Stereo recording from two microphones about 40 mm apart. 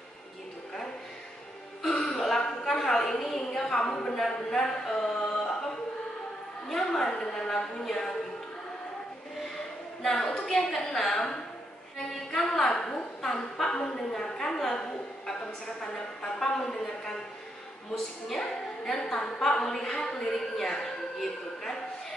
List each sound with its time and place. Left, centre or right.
2.1 s a sound: centre
6.7 s a woman's voice: centre
10.0 s a woman's voice: centre